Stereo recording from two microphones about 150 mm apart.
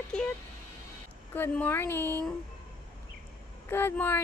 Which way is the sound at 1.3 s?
10° left (ahead or behind).